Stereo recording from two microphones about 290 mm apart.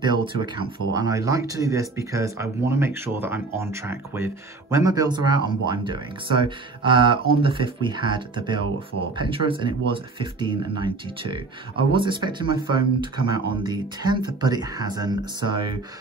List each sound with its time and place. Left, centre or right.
0.0 s speech: centre